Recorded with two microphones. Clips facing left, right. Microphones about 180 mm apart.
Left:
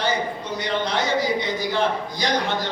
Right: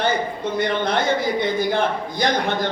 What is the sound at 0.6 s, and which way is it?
A man's voice, 55° right (ahead or behind).